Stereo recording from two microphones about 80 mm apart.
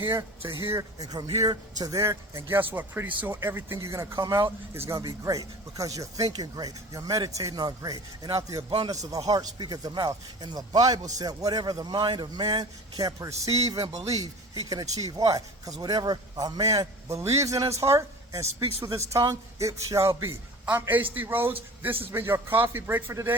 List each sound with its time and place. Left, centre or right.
0.2 s speech: right
0.9 s speech: right
8.7 s a man's voice: right
9.0 s speech: right
20.7 s a man's voice: right